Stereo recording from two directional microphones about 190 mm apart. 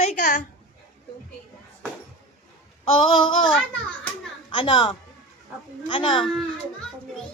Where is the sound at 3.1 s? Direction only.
25° left (ahead or behind).